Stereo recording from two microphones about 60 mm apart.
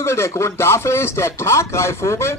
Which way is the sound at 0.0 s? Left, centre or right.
Left.